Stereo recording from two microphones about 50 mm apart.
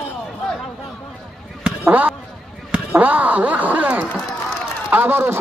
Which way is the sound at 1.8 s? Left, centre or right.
Right.